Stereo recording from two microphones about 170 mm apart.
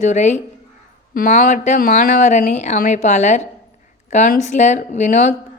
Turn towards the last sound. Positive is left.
turn(degrees=45)  # may be behind; listen again after turning